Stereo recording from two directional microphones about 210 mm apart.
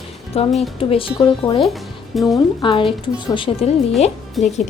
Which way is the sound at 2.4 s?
25° left (ahead or behind).